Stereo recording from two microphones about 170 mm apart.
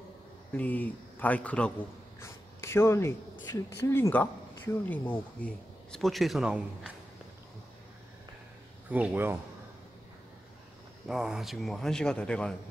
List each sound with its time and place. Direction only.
0.6 s speech: 10° left (ahead or behind)
2.1 s writing: 15° left (ahead or behind)
3.4 s speech: 15° left (ahead or behind); by 6.9 s 5° right (ahead or behind)
8.9 s speech: 10° right (ahead or behind)
11.1 s speech: centre (ahead or behind)